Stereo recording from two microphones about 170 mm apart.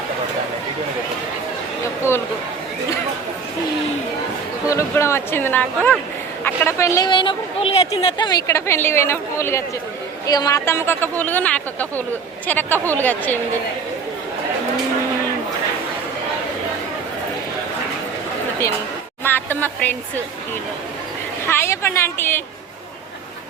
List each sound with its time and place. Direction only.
4.7 s a woman's voice: 15° left (ahead or behind); by 8.3 s 35° left (ahead or behind)
8.3 s a woman's voice: 20° left (ahead or behind)
19.2 s a sound: 10° left (ahead or behind)
21.4 s a woman's voice: 15° left (ahead or behind)